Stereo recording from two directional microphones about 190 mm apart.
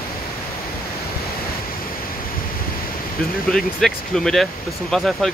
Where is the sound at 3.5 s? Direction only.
Centre (ahead or behind).